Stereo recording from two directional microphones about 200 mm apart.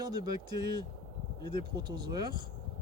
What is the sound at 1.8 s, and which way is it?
Speech, 20° right (ahead or behind).